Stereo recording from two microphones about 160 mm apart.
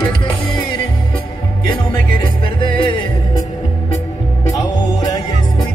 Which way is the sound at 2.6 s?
30° left (ahead or behind).